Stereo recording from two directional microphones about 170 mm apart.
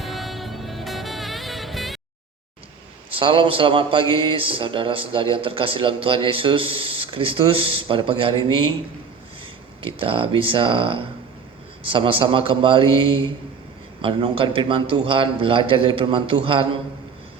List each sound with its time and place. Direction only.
0.0 s music: centre (ahead or behind)
3.2 s a man's voice: 30° right (ahead or behind)
9.8 s a man's voice: 30° right (ahead or behind)